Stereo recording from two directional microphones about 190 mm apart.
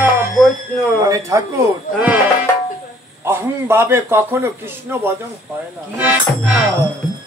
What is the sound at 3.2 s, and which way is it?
A man's voice, 15° right (ahead or behind).